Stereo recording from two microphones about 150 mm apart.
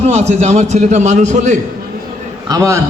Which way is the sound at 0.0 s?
45° right (ahead or behind).